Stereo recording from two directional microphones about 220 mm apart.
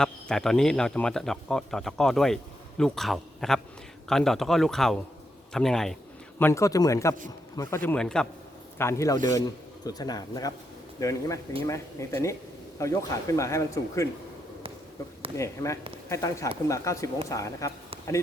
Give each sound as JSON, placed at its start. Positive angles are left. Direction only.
{"t": 0.0, "sound": "speech", "side_deg": 5}
{"t": 6.4, "sound": "speech", "side_deg": 15}
{"t": 15.4, "sound": "speech", "side_deg": 15}